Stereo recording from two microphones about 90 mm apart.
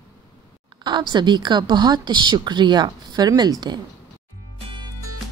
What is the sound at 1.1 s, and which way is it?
Speech, 55° right (ahead or behind).